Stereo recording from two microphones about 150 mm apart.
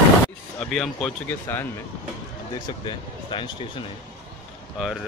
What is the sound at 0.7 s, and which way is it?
Speech, 5° left (ahead or behind).